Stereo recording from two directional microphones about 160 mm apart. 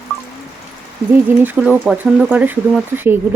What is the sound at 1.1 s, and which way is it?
Speech, 10° right (ahead or behind).